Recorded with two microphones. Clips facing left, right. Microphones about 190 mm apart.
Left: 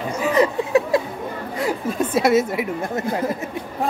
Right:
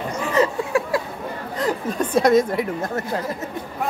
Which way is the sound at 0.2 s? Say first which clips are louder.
Left 2 dB; 15° left (ahead or behind).